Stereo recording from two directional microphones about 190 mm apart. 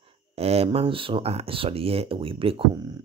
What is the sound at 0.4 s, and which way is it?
Speech, 30° right (ahead or behind).